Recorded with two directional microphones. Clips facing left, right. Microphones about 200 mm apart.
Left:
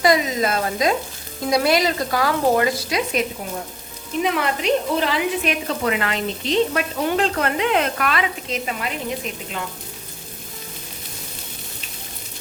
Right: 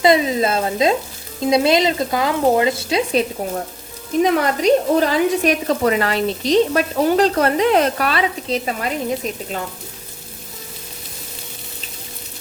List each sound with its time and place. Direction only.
0.0 s speech: 25° right (ahead or behind)
4.2 s speech: 40° right (ahead or behind)